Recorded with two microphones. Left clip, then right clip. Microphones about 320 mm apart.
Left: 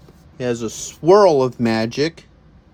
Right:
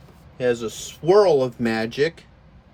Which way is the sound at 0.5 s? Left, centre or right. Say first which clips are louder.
Left 3 dB; centre.